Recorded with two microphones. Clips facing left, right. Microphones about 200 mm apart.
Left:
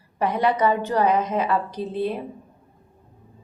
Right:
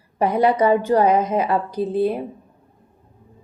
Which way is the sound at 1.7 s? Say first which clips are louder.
Right 6 dB; 10° right (ahead or behind).